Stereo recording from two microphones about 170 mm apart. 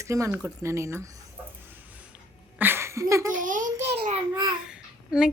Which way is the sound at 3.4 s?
50° right (ahead or behind).